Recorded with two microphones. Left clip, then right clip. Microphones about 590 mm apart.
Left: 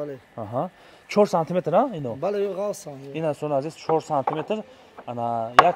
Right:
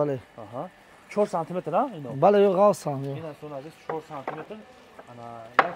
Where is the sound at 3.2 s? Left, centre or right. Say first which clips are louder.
Left 13 dB; left.